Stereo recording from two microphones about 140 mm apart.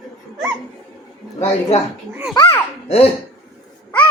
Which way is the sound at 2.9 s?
45° left (ahead or behind).